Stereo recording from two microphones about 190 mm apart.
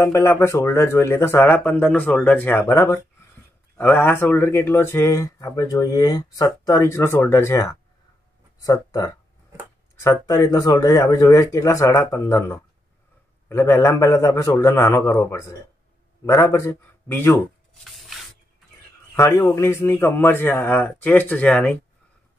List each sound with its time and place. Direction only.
0.0 s speech: 15° left (ahead or behind)
17.8 s spray: centre (ahead or behind)
19.1 s speech: 15° left (ahead or behind)